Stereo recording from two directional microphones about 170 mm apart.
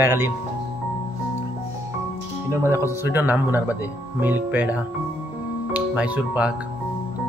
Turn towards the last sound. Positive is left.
turn(degrees=-10)  # may be behind; listen again after turning